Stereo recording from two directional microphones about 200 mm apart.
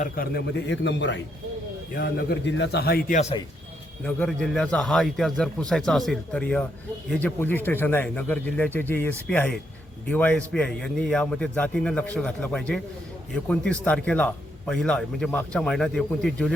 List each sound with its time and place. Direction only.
0.0 s a man's voice: 50° left (ahead or behind)
4.0 s speech: 5° left (ahead or behind)